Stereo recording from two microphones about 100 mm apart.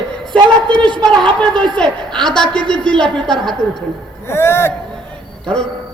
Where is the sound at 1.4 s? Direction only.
10° left (ahead or behind).